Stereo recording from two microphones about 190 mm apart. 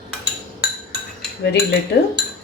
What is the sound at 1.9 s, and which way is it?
Speech, 60° left (ahead or behind).